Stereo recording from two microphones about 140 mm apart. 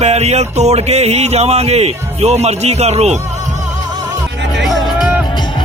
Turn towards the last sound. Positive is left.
turn(degrees=0)  # may be behind; listen again after turning